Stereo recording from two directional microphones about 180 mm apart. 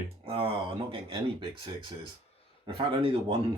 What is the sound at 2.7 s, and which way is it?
Speech, 30° right (ahead or behind).